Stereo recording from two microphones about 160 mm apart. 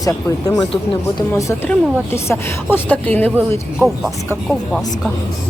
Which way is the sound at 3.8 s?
Centre (ahead or behind).